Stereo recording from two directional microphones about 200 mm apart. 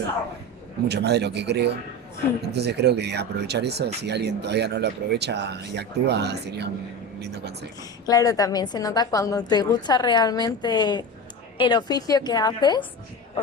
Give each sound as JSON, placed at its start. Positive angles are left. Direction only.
{"t": 0.9, "sound": "speech", "side_deg": -55}
{"t": 7.8, "sound": "a woman's voice", "side_deg": 20}